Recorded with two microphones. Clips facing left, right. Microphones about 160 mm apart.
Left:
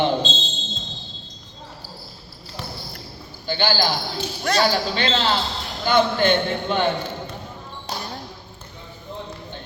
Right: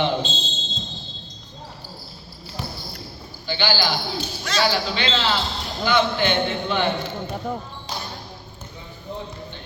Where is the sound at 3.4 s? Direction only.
45° left (ahead or behind).